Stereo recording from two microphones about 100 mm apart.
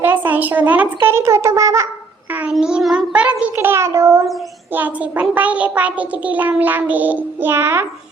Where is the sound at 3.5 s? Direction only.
25° right (ahead or behind).